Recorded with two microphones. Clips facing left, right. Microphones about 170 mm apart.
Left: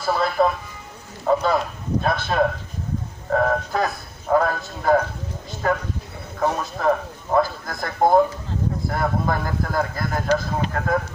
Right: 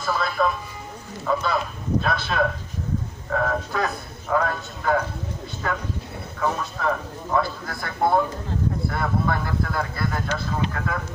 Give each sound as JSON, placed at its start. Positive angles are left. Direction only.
{"t": 0.0, "sound": "speech", "side_deg": 35}
{"t": 6.4, "sound": "speech", "side_deg": 40}